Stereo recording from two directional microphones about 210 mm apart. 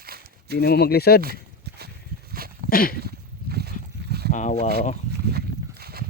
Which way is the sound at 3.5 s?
45° right (ahead or behind).